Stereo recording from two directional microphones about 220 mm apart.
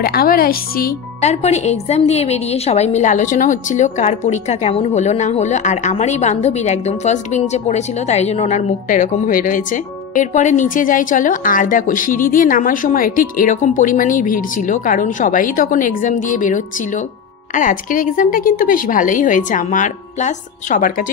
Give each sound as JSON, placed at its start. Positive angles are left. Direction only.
{"t": 0.0, "sound": "speech", "side_deg": 45}